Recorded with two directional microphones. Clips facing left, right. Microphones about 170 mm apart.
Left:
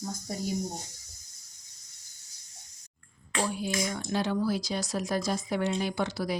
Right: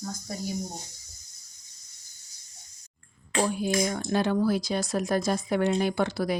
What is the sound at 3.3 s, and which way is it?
Speech, 50° right (ahead or behind).